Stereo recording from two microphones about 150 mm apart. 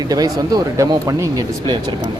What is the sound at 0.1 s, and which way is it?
Speech, 25° right (ahead or behind).